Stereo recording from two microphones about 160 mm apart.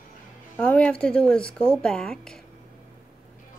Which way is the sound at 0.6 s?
10° left (ahead or behind).